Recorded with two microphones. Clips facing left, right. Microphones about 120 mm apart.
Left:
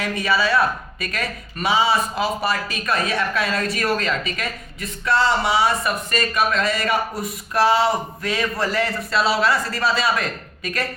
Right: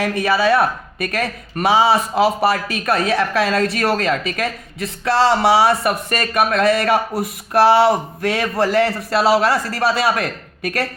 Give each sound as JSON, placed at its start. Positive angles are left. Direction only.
{"t": 0.0, "sound": "speech", "side_deg": -55}